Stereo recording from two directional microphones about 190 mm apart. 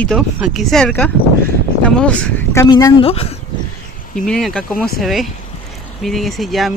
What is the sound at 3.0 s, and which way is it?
Speech, 30° left (ahead or behind).